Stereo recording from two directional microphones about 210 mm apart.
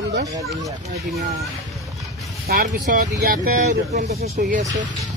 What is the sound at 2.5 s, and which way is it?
Speech, 45° right (ahead or behind).